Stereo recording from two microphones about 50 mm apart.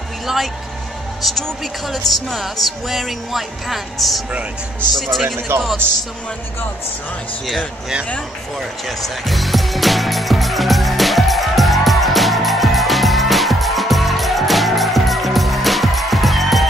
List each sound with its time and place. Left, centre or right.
1.2 s speech: centre
5.5 s speech: right
8.5 s music: centre